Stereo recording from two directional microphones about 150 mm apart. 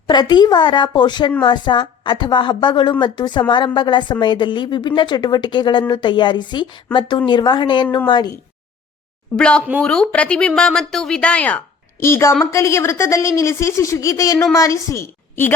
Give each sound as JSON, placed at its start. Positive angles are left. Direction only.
{"t": 0.1, "sound": "a woman's voice", "side_deg": 30}
{"t": 9.3, "sound": "speech", "side_deg": 5}